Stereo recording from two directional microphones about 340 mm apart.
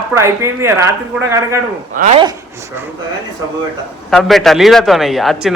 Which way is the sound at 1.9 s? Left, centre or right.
Centre.